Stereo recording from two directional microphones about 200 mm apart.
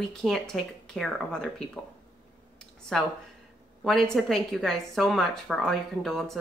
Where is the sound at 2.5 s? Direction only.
5° left (ahead or behind).